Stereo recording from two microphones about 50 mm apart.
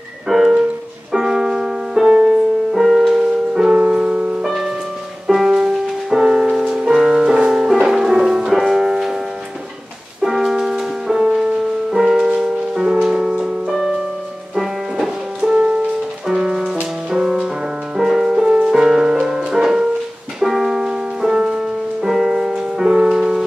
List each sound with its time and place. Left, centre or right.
0.3 s music: centre
4.4 s music: centre
10.2 s music: centre
15.5 s music: right
16.3 s music: centre